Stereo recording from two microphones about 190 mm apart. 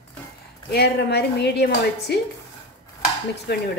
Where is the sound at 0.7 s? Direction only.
60° left (ahead or behind).